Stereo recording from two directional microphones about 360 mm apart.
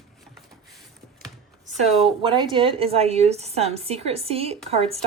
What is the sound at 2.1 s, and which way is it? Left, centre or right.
A woman's voice, centre.